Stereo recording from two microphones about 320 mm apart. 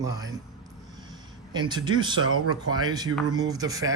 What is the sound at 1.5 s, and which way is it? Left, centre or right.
Speech, centre.